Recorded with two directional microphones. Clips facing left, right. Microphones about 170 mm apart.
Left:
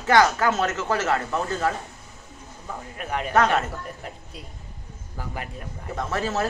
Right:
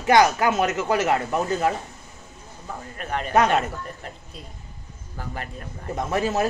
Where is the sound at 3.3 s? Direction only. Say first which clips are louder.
Right 1 dB; 15° right (ahead or behind).